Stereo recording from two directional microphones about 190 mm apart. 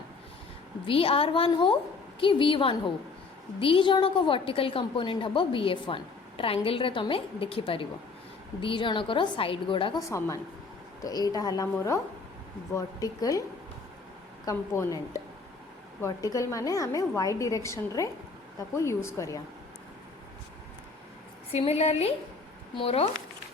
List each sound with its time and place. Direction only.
0.9 s a woman's voice: 30° left (ahead or behind)
10.1 s a woman's voice: 15° left (ahead or behind)
14.4 s a woman's voice: 15° left (ahead or behind)
21.5 s a woman's voice: 35° left (ahead or behind)